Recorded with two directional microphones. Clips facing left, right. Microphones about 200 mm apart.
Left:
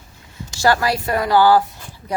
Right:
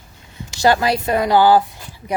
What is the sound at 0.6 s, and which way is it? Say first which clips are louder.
Speech: right 2 dB; 20° right (ahead or behind).